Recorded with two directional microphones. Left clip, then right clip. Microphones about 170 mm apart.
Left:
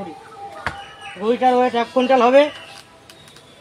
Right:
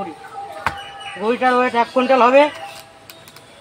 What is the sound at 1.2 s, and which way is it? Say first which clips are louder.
A man's voice: even; centre (ahead or behind).